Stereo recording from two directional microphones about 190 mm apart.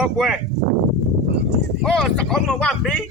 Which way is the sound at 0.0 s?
Centre (ahead or behind).